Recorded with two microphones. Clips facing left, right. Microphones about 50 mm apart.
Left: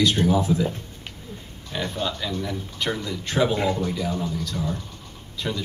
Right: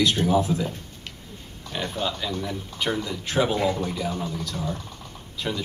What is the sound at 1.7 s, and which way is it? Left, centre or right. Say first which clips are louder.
Speech: left 1 dB; centre.